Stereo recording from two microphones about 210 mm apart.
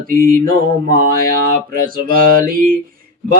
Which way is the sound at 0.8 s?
45° right (ahead or behind).